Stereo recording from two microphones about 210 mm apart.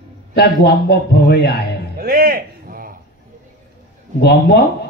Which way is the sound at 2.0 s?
45° right (ahead or behind).